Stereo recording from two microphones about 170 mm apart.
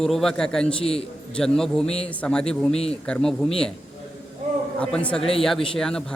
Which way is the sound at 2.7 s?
35° left (ahead or behind).